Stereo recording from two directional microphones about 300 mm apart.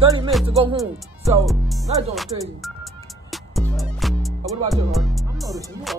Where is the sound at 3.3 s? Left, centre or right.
Centre.